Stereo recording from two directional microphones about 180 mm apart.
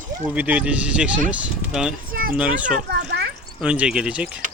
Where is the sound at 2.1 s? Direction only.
50° right (ahead or behind).